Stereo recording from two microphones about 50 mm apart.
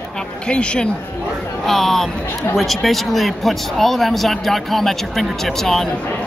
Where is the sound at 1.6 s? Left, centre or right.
Centre.